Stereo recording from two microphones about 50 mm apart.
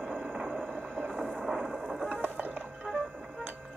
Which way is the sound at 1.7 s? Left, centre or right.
Centre.